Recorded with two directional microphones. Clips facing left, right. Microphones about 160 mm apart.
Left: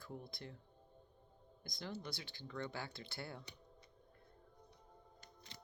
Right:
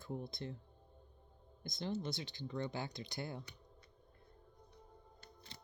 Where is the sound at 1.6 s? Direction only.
20° right (ahead or behind).